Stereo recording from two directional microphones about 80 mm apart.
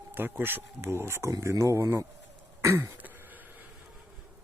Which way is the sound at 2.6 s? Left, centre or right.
Right.